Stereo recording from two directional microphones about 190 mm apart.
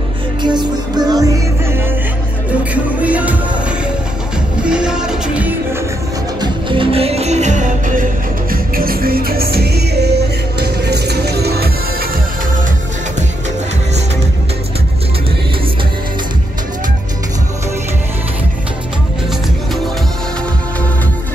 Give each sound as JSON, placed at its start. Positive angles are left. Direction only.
{"t": 0.4, "sound": "music", "side_deg": -20}
{"t": 4.6, "sound": "music", "side_deg": -5}
{"t": 6.4, "sound": "music", "side_deg": -25}